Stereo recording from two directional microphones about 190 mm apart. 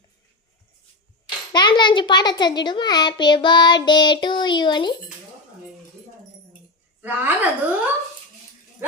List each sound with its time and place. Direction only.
1.5 s a child's voice: 25° left (ahead or behind)
7.0 s speech: 10° right (ahead or behind)